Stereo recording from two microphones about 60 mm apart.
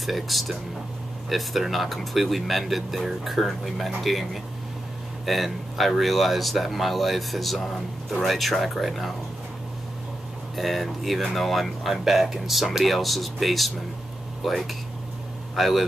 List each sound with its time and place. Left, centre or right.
0.0 s speech: centre
10.5 s speech: centre